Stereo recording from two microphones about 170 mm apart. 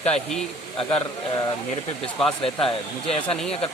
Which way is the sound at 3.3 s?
5° left (ahead or behind).